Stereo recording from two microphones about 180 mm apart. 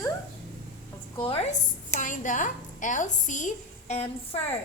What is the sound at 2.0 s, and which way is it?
A woman's voice, 45° left (ahead or behind).